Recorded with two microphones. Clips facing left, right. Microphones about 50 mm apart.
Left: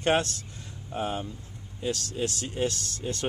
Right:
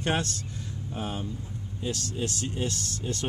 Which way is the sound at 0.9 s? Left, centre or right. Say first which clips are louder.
Left 3 dB; centre.